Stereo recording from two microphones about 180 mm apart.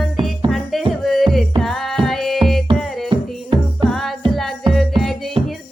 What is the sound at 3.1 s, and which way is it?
Music, 30° right (ahead or behind).